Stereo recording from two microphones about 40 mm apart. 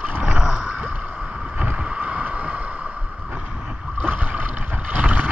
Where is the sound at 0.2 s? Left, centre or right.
Centre.